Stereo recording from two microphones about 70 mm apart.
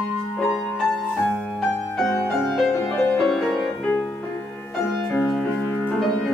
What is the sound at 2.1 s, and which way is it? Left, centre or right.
Music, centre.